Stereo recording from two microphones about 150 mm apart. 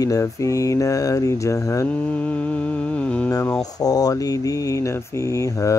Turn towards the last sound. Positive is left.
turn(degrees=20)  # may be behind; listen again after turning